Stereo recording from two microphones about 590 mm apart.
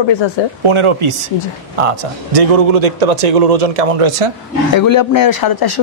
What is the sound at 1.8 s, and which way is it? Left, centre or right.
Speech, right.